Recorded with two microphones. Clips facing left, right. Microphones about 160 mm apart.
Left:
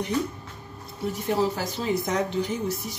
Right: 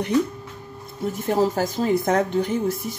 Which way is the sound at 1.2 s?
45° right (ahead or behind).